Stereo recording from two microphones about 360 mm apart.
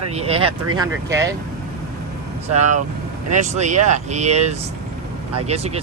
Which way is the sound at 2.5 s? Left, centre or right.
Centre.